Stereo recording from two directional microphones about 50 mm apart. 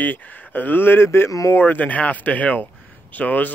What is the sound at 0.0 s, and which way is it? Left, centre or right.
Speech, left.